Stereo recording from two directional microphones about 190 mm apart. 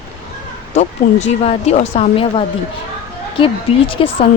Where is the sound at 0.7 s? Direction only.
35° left (ahead or behind).